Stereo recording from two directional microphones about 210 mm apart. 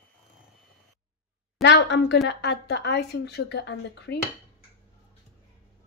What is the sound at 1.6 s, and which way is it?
A woman's voice, 55° left (ahead or behind).